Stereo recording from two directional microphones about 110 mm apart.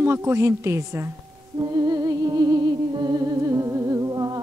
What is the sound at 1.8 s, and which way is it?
Music, 35° right (ahead or behind).